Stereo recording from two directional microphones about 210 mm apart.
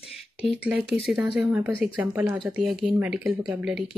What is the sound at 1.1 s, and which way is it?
Speech, 5° right (ahead or behind).